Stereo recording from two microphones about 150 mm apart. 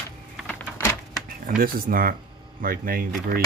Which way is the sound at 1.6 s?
75° right (ahead or behind).